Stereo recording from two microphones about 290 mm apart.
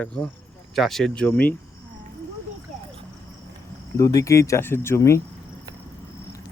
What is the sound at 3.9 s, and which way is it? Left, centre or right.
Speech, centre.